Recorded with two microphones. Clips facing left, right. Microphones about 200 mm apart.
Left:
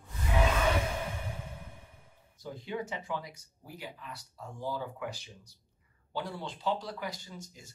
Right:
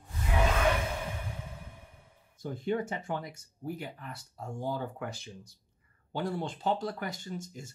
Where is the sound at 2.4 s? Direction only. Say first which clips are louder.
Right 6 dB; 50° right (ahead or behind).